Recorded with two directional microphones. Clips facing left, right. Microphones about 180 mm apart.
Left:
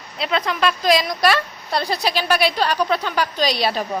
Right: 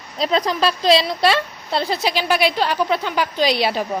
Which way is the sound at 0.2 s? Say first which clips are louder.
Right 2 dB; 35° right (ahead or behind).